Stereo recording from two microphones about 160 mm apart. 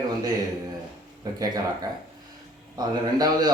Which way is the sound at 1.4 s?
20° right (ahead or behind).